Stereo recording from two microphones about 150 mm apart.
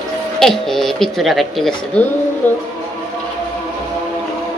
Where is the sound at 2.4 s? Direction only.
10° left (ahead or behind).